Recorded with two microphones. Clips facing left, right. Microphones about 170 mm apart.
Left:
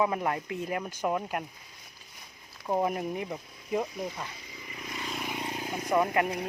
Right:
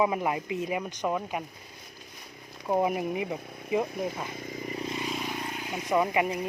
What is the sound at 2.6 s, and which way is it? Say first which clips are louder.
Speech: right 2 dB; 5° right (ahead or behind).